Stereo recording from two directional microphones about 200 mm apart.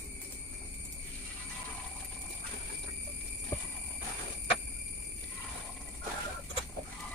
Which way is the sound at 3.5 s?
15° left (ahead or behind).